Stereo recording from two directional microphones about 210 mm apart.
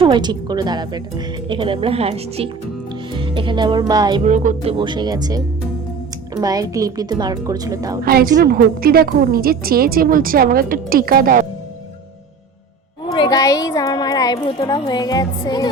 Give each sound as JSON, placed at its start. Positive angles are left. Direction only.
{"t": 0.0, "sound": "speech", "side_deg": -20}
{"t": 4.2, "sound": "a woman's voice", "side_deg": -35}
{"t": 8.0, "sound": "a woman's voice", "side_deg": -45}
{"t": 13.1, "sound": "a woman's voice", "side_deg": 20}